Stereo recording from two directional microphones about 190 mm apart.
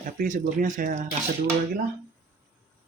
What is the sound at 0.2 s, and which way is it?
Speech, 45° right (ahead or behind).